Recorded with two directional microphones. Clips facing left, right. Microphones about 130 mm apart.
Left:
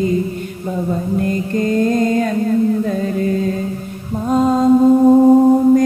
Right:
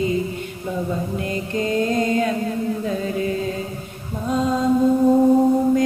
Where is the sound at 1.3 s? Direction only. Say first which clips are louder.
Left 3 dB; 45° left (ahead or behind).